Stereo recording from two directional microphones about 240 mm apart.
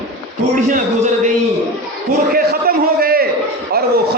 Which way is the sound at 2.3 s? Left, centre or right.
Right.